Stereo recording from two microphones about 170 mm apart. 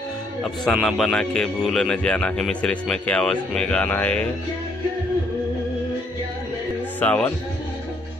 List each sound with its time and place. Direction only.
0.4 s speech: centre (ahead or behind)
7.0 s speech: 10° left (ahead or behind)